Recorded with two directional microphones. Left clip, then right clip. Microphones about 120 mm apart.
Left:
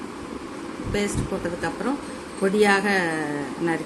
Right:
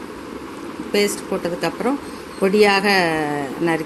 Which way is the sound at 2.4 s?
40° right (ahead or behind).